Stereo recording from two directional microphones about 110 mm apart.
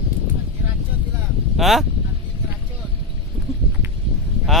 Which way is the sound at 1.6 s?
Centre (ahead or behind).